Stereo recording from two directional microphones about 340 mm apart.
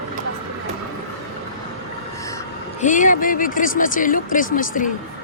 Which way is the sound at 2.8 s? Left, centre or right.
Left.